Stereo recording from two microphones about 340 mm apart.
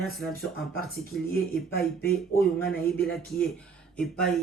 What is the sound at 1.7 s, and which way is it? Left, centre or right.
Speech, left.